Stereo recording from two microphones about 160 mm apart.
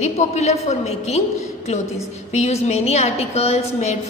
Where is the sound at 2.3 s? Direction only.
45° left (ahead or behind).